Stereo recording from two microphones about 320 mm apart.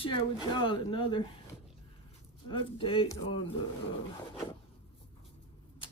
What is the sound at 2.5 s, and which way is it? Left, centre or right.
Speech, centre.